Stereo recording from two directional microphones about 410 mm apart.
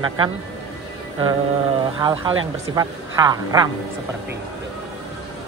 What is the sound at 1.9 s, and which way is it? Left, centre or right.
Speech, centre.